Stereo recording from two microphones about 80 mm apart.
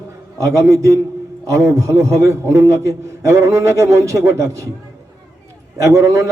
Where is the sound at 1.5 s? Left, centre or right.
Right.